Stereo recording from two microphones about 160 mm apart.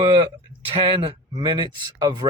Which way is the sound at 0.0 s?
30° right (ahead or behind).